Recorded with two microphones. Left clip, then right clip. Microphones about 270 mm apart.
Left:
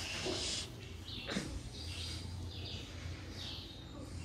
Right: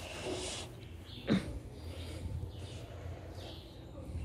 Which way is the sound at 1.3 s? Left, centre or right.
Centre.